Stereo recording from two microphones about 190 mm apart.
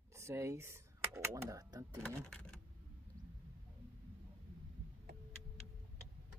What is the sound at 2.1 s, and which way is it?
Speech, 5° left (ahead or behind).